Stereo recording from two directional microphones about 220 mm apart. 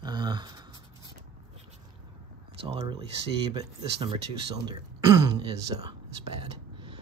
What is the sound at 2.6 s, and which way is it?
Speech, 25° right (ahead or behind).